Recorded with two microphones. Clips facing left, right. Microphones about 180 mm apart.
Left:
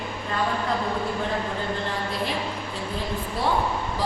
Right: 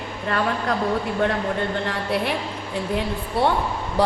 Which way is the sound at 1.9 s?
65° right (ahead or behind).